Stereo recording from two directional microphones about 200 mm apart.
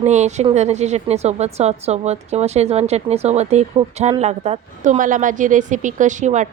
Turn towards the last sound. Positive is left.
turn(degrees=-35)  # may be behind; listen again after turning